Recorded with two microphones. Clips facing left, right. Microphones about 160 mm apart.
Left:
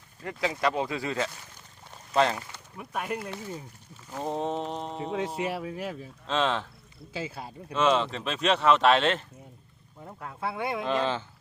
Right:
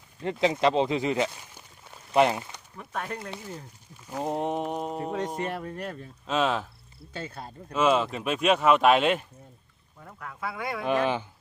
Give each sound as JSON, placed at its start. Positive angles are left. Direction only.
{"t": 0.2, "sound": "speech", "side_deg": -25}
{"t": 2.7, "sound": "speech", "side_deg": 10}
{"t": 4.1, "sound": "speech", "side_deg": -15}
{"t": 6.2, "sound": "speech", "side_deg": -10}
{"t": 7.1, "sound": "speech", "side_deg": 5}
{"t": 7.7, "sound": "speech", "side_deg": -10}
{"t": 10.0, "sound": "speech", "side_deg": 25}
{"t": 10.8, "sound": "speech", "side_deg": -15}